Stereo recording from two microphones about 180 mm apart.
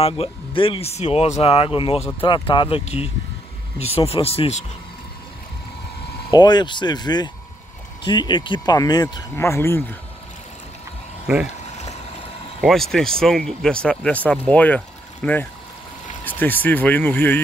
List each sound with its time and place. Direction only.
0.0 s speech: 30° left (ahead or behind)
6.3 s speech: 25° left (ahead or behind)
12.6 s speech: centre (ahead or behind)